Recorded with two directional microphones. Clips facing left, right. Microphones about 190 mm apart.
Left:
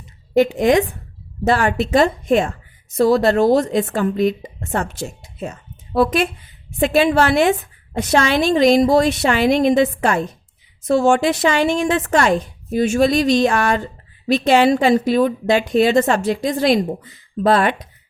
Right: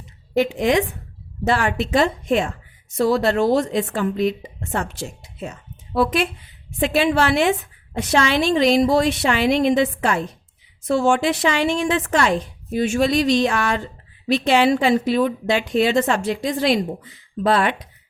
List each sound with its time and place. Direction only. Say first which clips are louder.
0.3 s a woman's voice: left 4 dB; 45° left (ahead or behind)